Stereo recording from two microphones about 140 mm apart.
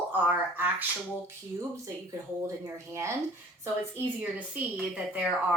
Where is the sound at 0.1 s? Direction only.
15° right (ahead or behind).